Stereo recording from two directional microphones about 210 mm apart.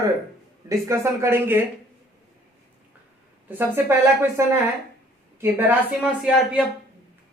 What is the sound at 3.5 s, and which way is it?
A woman's voice, 10° right (ahead or behind).